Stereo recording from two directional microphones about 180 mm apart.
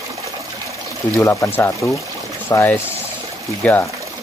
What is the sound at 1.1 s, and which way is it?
Speech, 10° left (ahead or behind).